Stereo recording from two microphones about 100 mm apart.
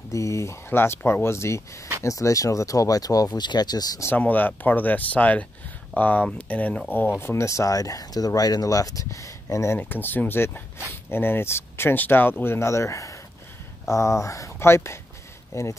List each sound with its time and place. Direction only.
0.1 s speech: 30° left (ahead or behind)
4.2 s speech: 15° left (ahead or behind)
7.2 s speech: 25° left (ahead or behind)
9.8 s speech: 20° left (ahead or behind)